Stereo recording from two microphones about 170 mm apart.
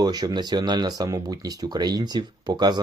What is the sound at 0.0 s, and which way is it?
Speech, 25° right (ahead or behind).